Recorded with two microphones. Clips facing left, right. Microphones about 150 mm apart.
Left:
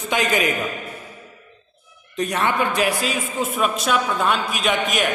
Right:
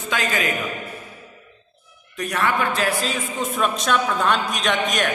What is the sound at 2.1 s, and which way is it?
Speech, 20° left (ahead or behind).